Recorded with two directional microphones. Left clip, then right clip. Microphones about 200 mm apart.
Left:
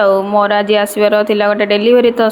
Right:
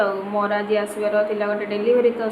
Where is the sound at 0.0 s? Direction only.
40° left (ahead or behind).